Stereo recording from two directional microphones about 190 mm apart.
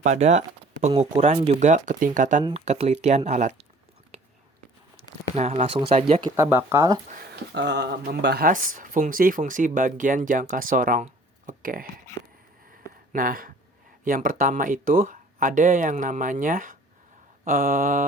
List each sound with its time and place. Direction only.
0.0 s speech: 40° right (ahead or behind)
2.4 s speech: 30° right (ahead or behind)
5.4 s speech: 35° right (ahead or behind)
6.3 s speech: 15° right (ahead or behind)
7.5 s speech: 65° right (ahead or behind); by 11.9 s 45° right (ahead or behind)
13.1 s speech: 50° right (ahead or behind)